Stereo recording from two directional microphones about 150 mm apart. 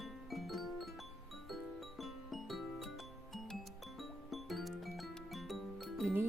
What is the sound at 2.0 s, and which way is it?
Music, centre (ahead or behind).